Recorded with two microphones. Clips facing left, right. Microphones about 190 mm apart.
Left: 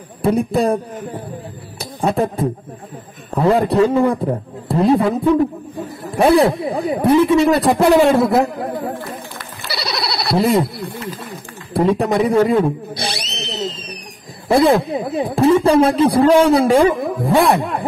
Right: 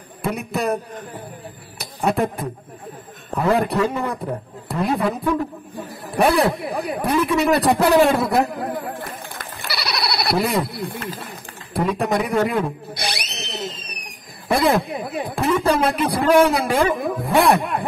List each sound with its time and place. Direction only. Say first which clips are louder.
0.2 s a man's voice: left 8 dB; 30° left (ahead or behind)
1.8 s a man's voice: left 3 dB; 30° left (ahead or behind)
9.7 s bleat: left 2 dB; 25° left (ahead or behind)
11.7 s drill: left 5 dB; 30° left (ahead or behind)
14.5 s a man's voice: left 5 dB; 30° left (ahead or behind)